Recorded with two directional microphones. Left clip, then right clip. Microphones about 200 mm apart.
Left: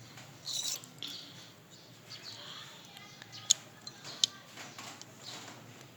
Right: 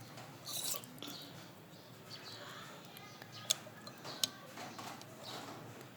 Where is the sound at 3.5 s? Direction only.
50° right (ahead or behind).